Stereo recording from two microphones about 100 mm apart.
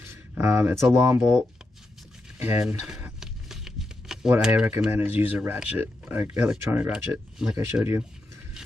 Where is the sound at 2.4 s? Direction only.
20° right (ahead or behind).